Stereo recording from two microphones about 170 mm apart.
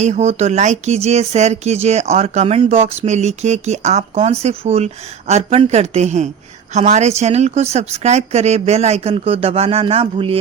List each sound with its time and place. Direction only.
0.0 s speech: 40° right (ahead or behind)